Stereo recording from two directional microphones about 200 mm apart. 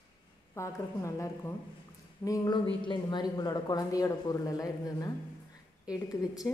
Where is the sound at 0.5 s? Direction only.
15° left (ahead or behind).